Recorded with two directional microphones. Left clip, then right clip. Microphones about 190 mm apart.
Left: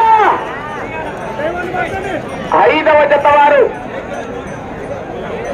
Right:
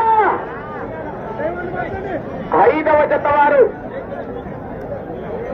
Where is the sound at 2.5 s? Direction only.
60° left (ahead or behind).